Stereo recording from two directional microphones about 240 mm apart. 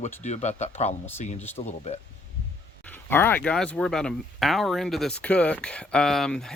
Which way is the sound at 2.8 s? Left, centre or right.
Centre.